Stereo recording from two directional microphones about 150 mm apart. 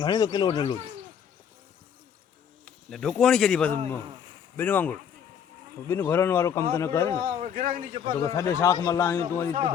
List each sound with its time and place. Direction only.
0.0 s a man's voice: 30° left (ahead or behind)
2.9 s speech: 5° left (ahead or behind)
7.3 s a man's voice: 60° right (ahead or behind)
8.1 s a man's voice: 20° left (ahead or behind)